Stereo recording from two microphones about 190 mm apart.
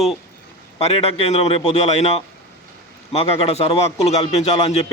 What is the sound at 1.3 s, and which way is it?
A man's voice, 30° left (ahead or behind).